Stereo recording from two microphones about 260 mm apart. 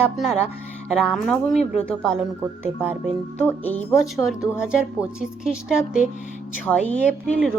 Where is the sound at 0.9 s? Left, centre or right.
Centre.